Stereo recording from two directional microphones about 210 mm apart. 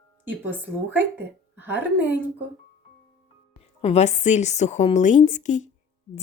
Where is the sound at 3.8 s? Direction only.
30° left (ahead or behind).